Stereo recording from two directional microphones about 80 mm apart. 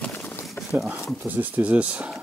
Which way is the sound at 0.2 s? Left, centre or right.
Left.